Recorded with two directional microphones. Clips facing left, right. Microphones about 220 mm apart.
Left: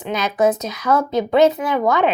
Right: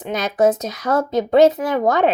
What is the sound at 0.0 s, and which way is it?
Speech, 45° right (ahead or behind).